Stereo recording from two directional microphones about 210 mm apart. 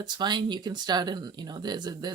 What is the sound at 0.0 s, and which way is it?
Speech, 20° right (ahead or behind).